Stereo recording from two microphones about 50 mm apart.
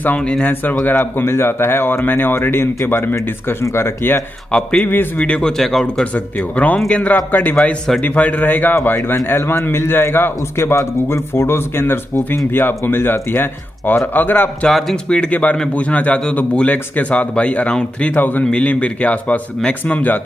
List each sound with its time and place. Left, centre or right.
0.4 s a man's voice: left
3.6 s speech: left
4.7 s speech: left
5.4 s speech: centre
6.1 s a man's voice: left
8.0 s a man's voice: left
15.0 s speech: left
18.0 s a man's voice: left